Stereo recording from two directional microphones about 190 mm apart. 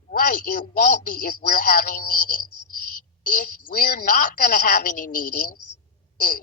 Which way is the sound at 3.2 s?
45° left (ahead or behind).